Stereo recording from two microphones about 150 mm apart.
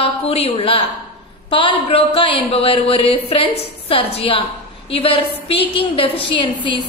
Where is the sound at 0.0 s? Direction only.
45° left (ahead or behind).